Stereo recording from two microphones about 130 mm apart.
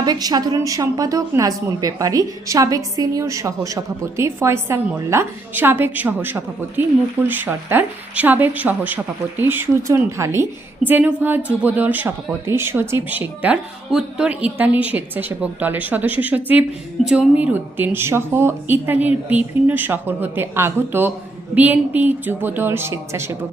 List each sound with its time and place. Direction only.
0.0 s a woman's voice: 30° right (ahead or behind)